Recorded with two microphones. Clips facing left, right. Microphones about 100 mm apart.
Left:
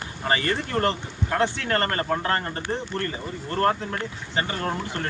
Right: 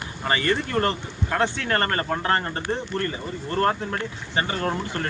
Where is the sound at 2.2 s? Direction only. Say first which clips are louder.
Right 2 dB; 30° right (ahead or behind).